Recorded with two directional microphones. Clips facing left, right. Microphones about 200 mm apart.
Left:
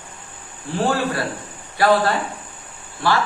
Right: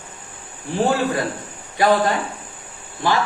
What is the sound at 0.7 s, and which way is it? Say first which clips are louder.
A woman's voice: right 2 dB; 20° right (ahead or behind).